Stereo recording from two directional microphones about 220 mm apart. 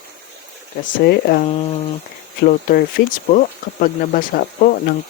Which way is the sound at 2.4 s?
40° left (ahead or behind).